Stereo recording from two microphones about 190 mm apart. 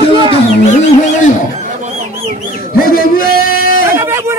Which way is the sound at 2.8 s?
50° left (ahead or behind).